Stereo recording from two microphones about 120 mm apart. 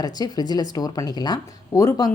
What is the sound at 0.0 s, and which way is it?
A woman's voice, 35° left (ahead or behind).